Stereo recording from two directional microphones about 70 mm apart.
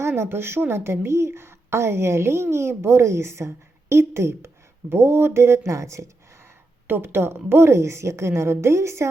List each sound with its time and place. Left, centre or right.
0.0 s a woman's voice: right
6.8 s a woman's voice: right